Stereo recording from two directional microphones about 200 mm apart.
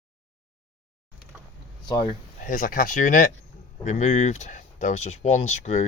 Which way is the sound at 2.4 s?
45° left (ahead or behind).